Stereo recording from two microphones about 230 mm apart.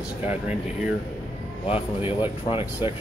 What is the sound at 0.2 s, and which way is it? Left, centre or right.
Speech, centre.